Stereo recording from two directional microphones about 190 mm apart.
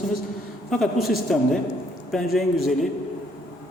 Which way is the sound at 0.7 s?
Centre (ahead or behind).